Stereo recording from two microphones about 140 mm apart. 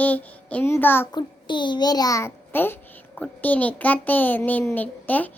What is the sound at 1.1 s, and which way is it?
A child's voice, 35° left (ahead or behind).